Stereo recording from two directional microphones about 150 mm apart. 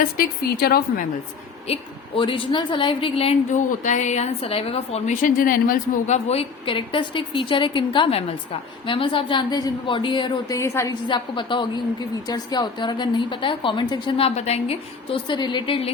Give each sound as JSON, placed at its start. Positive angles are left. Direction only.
{"t": 0.0, "sound": "a woman's voice", "side_deg": 85}
{"t": 1.6, "sound": "a woman's voice", "side_deg": 40}
{"t": 3.5, "sound": "a woman's voice", "side_deg": 55}
{"t": 5.1, "sound": "a woman's voice", "side_deg": 65}
{"t": 6.2, "sound": "a woman's voice", "side_deg": 40}
{"t": 10.6, "sound": "a woman's voice", "side_deg": 20}
{"t": 11.1, "sound": "a woman's voice", "side_deg": 30}